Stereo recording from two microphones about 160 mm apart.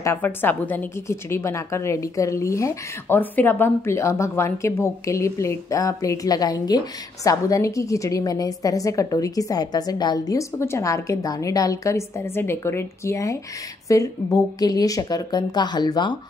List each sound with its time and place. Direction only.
0.0 s a woman's voice: 15° left (ahead or behind)